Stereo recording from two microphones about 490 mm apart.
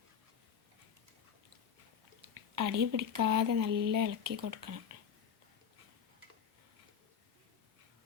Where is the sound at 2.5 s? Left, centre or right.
Right.